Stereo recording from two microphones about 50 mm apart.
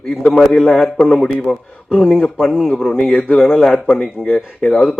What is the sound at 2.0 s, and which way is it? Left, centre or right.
Speech, centre.